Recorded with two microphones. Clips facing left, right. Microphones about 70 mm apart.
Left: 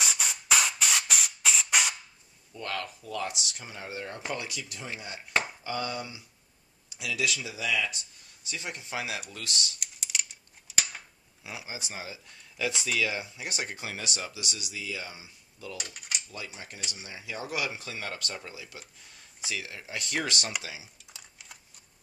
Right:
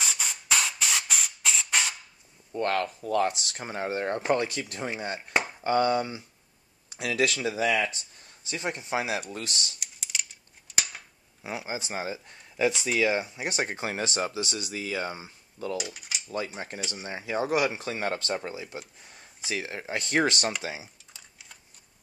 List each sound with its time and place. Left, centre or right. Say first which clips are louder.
0.0 s spray: left 1 dB; centre
2.5 s speech: right 8 dB; right
9.8 s a sound: even; centre
11.4 s speech: right 7 dB; right
15.8 s mechanisms: right 3 dB; centre
16.3 s speech: right 9 dB; right
21.1 s typing: left 1 dB; centre